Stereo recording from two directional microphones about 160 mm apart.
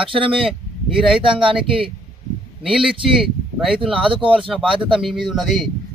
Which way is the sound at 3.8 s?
35° right (ahead or behind).